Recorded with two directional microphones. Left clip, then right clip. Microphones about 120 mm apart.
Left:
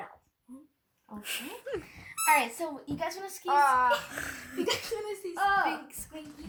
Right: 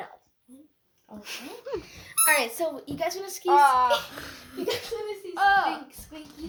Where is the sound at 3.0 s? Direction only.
70° right (ahead or behind); by 4.0 s 50° right (ahead or behind).